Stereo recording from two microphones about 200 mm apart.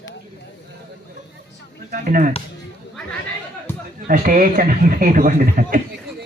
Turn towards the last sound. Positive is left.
turn(degrees=-45)  # may be behind; listen again after turning